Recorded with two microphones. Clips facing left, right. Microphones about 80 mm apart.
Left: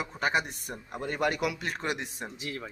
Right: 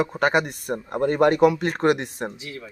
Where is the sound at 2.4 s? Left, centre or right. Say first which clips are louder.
Right 1 dB; left.